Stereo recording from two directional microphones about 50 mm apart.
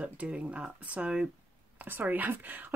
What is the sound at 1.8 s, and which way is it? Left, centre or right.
Speech, right.